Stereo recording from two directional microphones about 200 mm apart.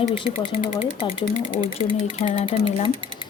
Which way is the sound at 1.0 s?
25° left (ahead or behind).